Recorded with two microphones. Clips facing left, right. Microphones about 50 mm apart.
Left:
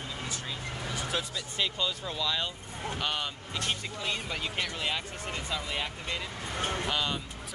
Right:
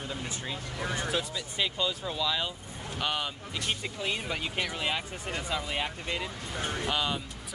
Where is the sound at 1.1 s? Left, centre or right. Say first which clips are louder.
Right 1 dB; centre.